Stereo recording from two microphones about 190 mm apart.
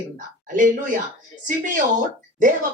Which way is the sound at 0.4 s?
45° right (ahead or behind).